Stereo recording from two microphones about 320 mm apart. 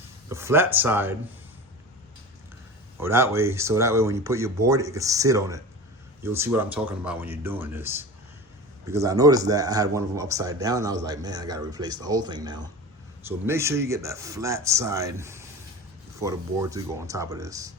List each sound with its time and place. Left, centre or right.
0.3 s speech: centre
3.0 s speech: centre